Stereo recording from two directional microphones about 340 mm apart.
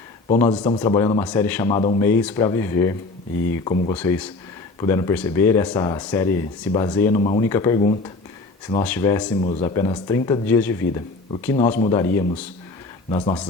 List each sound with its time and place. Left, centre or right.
0.3 s speech: centre
8.8 s speech: centre
11.5 s speech: centre